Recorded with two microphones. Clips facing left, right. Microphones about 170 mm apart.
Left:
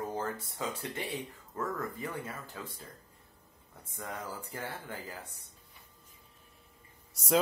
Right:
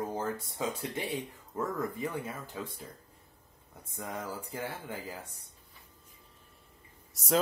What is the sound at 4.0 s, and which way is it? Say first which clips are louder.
Speech: right 2 dB; 20° right (ahead or behind).